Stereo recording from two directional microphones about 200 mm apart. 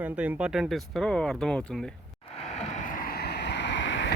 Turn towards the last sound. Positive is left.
turn(degrees=65)  # may be behind; listen again after turning